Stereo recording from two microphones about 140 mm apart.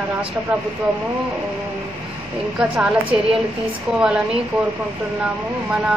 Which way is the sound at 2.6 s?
5° right (ahead or behind).